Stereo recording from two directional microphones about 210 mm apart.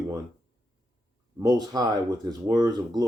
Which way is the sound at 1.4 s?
15° right (ahead or behind).